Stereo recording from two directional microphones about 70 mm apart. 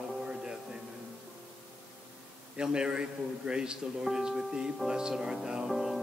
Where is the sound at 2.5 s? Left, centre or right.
Centre.